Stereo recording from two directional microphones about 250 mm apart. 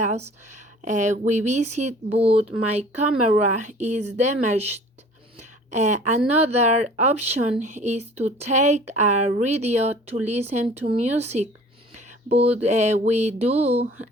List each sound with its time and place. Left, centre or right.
0.8 s speech: right